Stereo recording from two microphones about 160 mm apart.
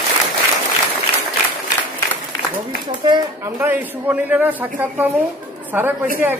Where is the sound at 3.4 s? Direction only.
15° right (ahead or behind).